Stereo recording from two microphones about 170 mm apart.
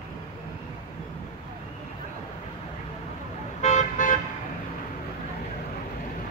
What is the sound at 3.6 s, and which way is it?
Toot, 45° left (ahead or behind).